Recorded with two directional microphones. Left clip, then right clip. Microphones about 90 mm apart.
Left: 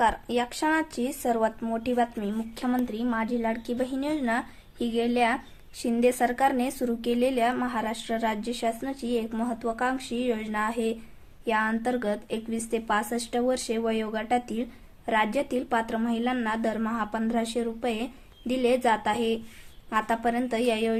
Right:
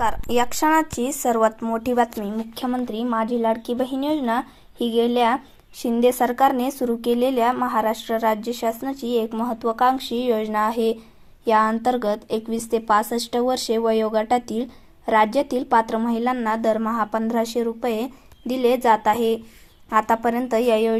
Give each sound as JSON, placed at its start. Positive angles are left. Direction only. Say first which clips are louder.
{"t": 0.0, "sound": "speech", "louder": "right 4 dB", "side_deg": -45}
{"t": 0.7, "sound": "speech", "louder": "right 7 dB", "side_deg": -25}